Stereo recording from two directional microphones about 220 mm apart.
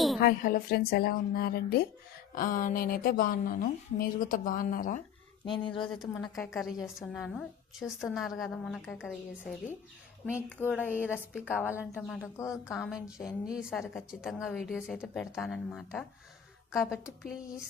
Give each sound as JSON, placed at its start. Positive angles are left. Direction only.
{"t": 0.2, "sound": "a woman's voice", "side_deg": 40}
{"t": 5.5, "sound": "speech", "side_deg": 20}
{"t": 6.3, "sound": "a woman's voice", "side_deg": 0}
{"t": 12.7, "sound": "a woman's voice", "side_deg": 0}